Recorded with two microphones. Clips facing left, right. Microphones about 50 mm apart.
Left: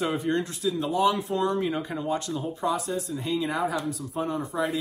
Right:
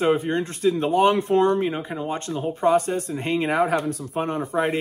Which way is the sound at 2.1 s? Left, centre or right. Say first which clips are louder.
Right 3 dB; right.